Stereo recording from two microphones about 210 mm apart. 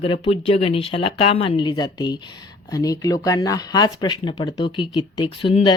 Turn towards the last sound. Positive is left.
turn(degrees=25)  # may be behind; listen again after turning